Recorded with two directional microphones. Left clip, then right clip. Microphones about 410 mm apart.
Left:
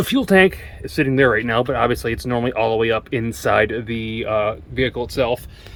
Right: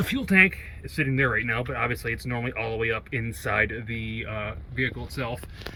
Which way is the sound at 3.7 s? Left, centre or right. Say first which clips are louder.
Left 8 dB; left.